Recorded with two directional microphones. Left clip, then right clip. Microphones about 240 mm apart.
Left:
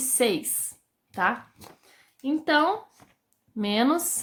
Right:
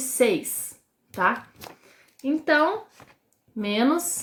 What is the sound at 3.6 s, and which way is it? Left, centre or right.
Speech, left.